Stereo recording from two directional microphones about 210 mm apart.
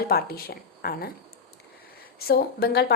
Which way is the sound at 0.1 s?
45° left (ahead or behind).